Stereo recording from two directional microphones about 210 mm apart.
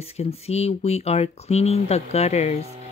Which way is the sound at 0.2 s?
30° left (ahead or behind).